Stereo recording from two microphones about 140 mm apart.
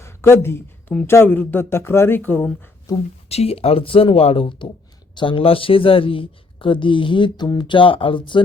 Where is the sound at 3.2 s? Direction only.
45° left (ahead or behind).